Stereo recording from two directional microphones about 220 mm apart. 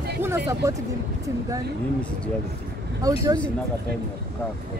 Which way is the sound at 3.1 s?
15° right (ahead or behind).